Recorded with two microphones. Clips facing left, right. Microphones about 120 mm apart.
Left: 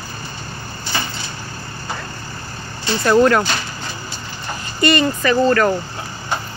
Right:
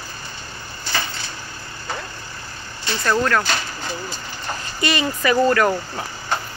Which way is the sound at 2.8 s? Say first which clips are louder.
Left 7 dB; 15° left (ahead or behind).